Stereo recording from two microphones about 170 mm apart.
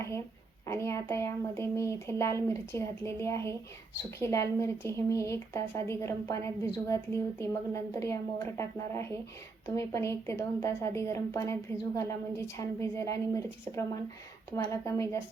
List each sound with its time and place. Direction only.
0.6 s speech: 15° left (ahead or behind)